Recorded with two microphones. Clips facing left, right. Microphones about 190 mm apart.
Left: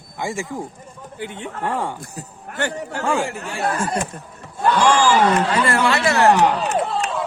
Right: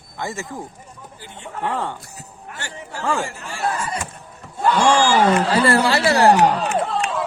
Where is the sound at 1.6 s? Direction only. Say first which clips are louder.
Even; 15° left (ahead or behind).